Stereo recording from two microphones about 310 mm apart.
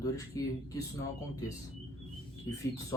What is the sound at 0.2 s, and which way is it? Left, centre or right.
Speech, centre.